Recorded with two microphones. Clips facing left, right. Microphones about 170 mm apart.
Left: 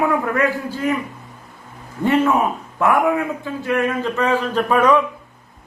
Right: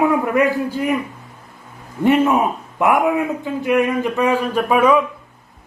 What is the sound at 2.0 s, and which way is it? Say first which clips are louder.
A man's voice: right 2 dB; 15° right (ahead or behind).